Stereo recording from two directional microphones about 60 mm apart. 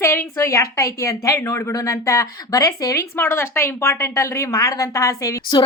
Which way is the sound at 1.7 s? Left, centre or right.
Left.